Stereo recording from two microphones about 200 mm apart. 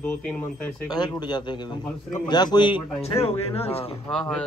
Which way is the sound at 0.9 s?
20° left (ahead or behind).